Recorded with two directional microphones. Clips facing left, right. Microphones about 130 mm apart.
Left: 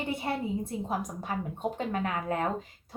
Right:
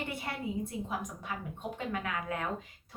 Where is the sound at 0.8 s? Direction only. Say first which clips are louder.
Left 5 dB; 35° left (ahead or behind).